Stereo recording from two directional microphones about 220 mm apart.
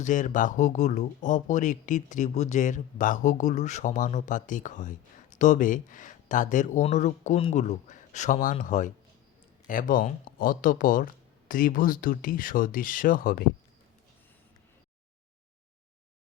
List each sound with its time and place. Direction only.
0.0 s speech: 35° left (ahead or behind)